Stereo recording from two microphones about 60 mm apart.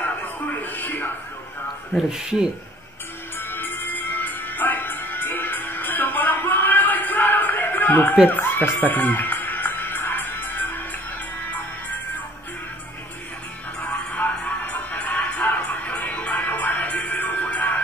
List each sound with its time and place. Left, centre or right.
0.0 s music: left
2.0 s speech: centre
3.3 s music: left
13.7 s music: centre
14.1 s music: left